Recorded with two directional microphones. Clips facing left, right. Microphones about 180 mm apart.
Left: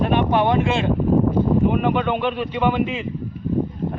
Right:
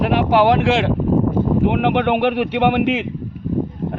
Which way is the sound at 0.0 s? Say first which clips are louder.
Right 3 dB; 90° right.